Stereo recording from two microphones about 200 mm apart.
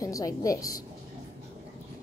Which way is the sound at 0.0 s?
15° left (ahead or behind).